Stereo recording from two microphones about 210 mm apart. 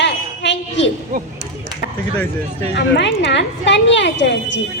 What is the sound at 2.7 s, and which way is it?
A woman's voice, 60° left (ahead or behind).